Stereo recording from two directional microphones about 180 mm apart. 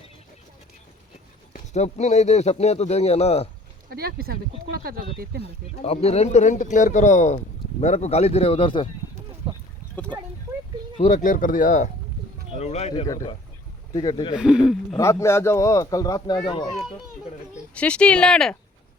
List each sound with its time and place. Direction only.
1.5 s speech: 40° left (ahead or behind)
3.8 s speech: 55° right (ahead or behind)
5.4 s speech: 35° left (ahead or behind)
9.5 s a sound: 30° right (ahead or behind)
10.9 s speech: 40° left (ahead or behind)
13.1 s a man's voice: 20° left (ahead or behind)
14.3 s speech: 5° right (ahead or behind)
14.9 s a man's voice: 15° left (ahead or behind)
17.7 s speech: 5° left (ahead or behind)